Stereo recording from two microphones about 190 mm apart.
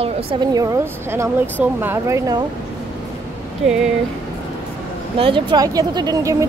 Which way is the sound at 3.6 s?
5° right (ahead or behind).